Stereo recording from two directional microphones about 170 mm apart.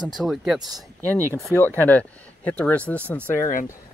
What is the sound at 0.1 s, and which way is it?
Speech, centre (ahead or behind).